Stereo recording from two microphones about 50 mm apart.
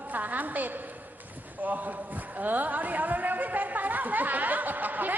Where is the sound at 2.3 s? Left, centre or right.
Right.